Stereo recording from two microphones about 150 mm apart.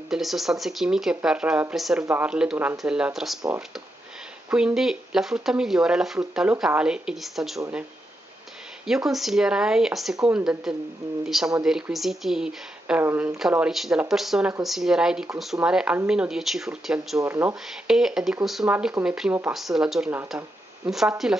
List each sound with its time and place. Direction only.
0.1 s speech: centre (ahead or behind)
4.5 s speech: 5° right (ahead or behind)
8.8 s speech: centre (ahead or behind)
17.2 s speech: 15° right (ahead or behind)
17.8 s speech: 5° right (ahead or behind)